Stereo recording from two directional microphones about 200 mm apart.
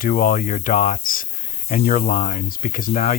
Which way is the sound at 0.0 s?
45° left (ahead or behind).